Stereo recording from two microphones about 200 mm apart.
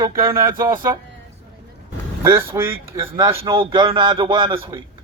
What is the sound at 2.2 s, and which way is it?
A man's voice, 15° right (ahead or behind).